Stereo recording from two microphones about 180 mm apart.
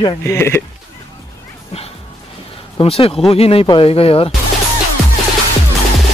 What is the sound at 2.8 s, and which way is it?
Speech, 30° left (ahead or behind).